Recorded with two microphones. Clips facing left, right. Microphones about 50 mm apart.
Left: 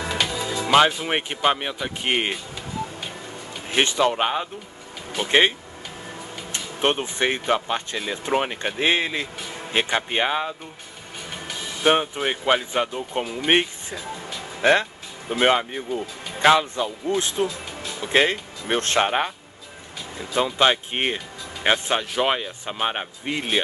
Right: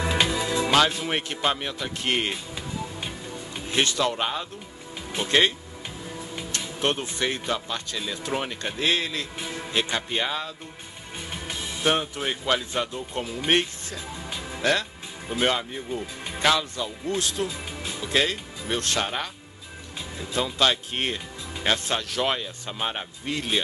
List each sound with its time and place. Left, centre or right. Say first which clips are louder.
0.0 s music: right 1 dB; centre
0.7 s speech: left 6 dB; left
3.7 s speech: left 4 dB; left
6.5 s speech: left 4 dB; left
11.8 s speech: left 5 dB; left